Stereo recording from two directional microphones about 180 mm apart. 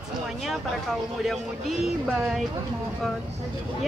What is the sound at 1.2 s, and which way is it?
Speech, centre (ahead or behind).